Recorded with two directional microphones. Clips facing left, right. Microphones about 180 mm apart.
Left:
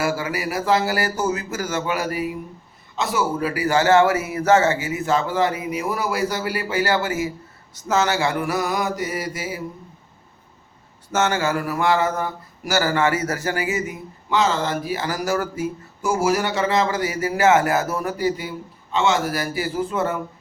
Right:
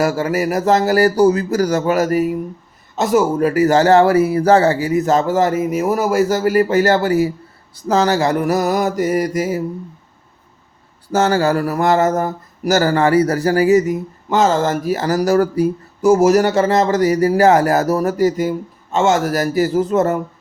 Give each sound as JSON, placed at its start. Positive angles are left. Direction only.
{"t": 0.0, "sound": "speech", "side_deg": -40}
{"t": 7.8, "sound": "mantra", "side_deg": -35}
{"t": 11.1, "sound": "speech", "side_deg": -35}